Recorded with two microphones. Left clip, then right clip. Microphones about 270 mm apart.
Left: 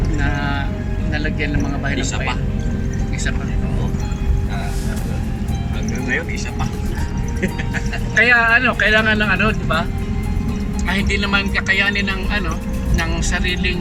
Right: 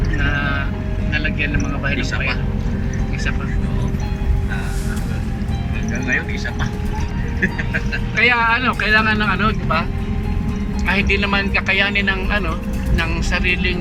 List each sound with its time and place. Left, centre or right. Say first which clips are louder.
8.2 s speech: left 2 dB; centre
8.5 s speech: left 4 dB; right
8.9 s speech: right 2 dB; centre
10.8 s speech: right 3 dB; centre